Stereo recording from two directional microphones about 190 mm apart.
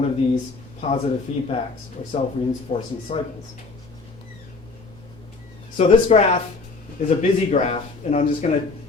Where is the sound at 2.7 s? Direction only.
35° left (ahead or behind).